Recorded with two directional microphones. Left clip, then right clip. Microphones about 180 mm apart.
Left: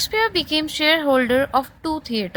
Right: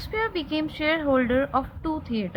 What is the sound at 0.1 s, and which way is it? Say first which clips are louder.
A woman's voice: left 3 dB; 55° left (ahead or behind).